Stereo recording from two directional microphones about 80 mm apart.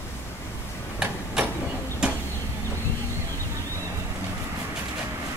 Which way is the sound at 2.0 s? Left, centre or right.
Centre.